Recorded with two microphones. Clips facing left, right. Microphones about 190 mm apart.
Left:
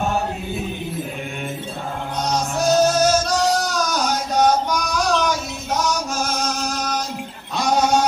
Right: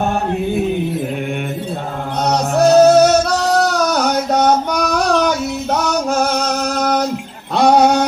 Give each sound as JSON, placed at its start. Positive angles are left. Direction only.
{"t": 2.2, "sound": "music", "side_deg": -65}